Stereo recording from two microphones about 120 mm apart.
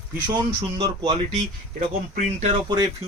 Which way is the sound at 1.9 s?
65° right (ahead or behind).